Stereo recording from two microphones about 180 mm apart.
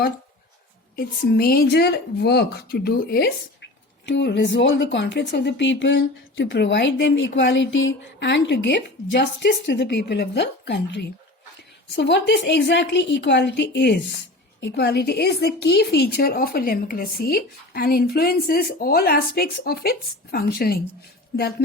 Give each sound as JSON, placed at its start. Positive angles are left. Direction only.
{"t": 0.9, "sound": "a woman's voice", "side_deg": 55}
{"t": 4.0, "sound": "a woman's voice", "side_deg": 70}